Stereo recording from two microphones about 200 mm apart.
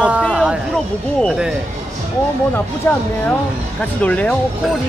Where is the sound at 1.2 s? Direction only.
Centre (ahead or behind).